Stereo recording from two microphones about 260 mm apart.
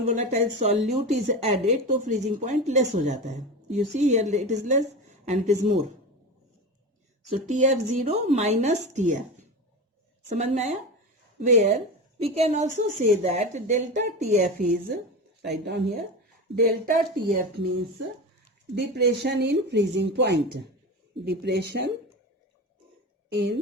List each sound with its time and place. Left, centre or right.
0.0 s speech: right
7.3 s speech: right
23.3 s speech: right